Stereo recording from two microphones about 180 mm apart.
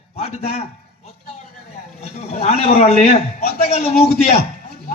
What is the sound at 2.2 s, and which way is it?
A man's voice, 35° left (ahead or behind).